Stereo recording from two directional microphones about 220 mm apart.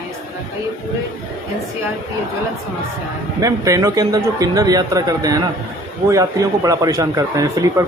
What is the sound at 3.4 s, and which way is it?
A man's voice, 15° right (ahead or behind).